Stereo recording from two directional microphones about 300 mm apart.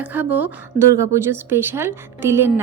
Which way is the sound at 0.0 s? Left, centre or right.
Centre.